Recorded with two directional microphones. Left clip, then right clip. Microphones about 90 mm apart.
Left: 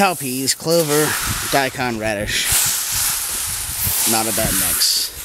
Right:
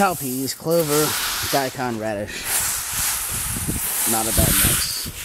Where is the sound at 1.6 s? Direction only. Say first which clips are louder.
Left 6 dB; 50° left (ahead or behind).